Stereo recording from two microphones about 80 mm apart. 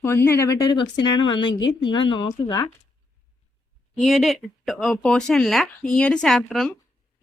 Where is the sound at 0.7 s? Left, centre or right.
Left.